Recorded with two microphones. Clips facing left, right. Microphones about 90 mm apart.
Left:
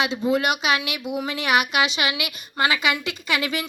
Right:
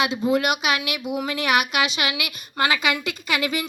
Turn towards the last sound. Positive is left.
turn(degrees=25)  # may be behind; listen again after turning